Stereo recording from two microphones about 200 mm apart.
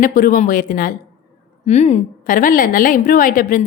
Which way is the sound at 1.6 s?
35° left (ahead or behind).